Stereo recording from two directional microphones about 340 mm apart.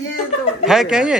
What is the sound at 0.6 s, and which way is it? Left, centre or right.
Speech, centre.